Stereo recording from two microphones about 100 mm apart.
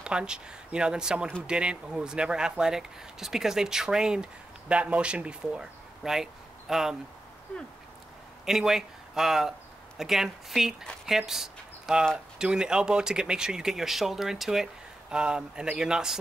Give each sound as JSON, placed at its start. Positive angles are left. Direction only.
{"t": 0.0, "sound": "speech", "side_deg": -10}
{"t": 8.5, "sound": "speech", "side_deg": -5}